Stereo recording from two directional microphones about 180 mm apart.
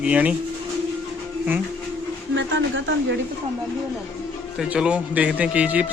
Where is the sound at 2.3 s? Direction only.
90° right.